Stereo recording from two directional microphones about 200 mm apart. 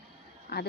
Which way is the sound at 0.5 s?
55° left (ahead or behind).